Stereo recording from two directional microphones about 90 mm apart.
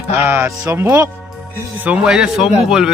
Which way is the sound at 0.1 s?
25° right (ahead or behind).